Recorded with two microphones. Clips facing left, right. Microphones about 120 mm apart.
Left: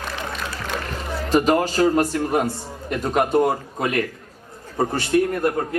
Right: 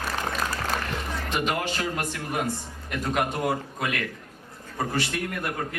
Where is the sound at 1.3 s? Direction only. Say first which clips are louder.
Left 10 dB; 40° left (ahead or behind).